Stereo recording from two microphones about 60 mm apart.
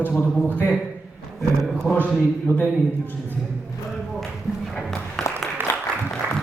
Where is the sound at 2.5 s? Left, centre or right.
Left.